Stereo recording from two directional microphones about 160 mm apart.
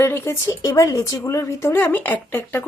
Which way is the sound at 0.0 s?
15° left (ahead or behind).